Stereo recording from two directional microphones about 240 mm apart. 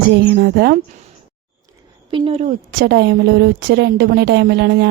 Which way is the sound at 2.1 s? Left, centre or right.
Right.